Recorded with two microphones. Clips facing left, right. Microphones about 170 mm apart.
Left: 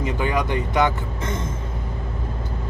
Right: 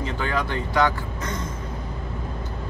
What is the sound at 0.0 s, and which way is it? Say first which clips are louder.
Speech: left 3 dB; 15° left (ahead or behind).